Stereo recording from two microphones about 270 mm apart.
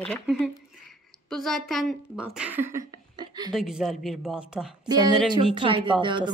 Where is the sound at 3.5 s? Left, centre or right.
Centre.